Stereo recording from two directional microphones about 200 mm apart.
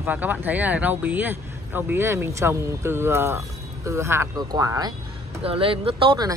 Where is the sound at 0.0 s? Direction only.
10° right (ahead or behind).